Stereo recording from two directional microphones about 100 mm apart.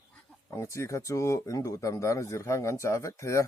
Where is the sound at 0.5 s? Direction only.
30° left (ahead or behind).